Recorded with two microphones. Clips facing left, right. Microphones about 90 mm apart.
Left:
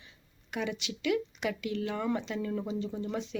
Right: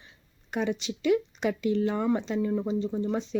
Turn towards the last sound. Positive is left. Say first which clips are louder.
# right 6 dB
turn(degrees=-30)  # may be behind; listen again after turning